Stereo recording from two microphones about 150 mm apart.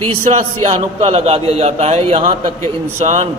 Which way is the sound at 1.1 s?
45° right (ahead or behind).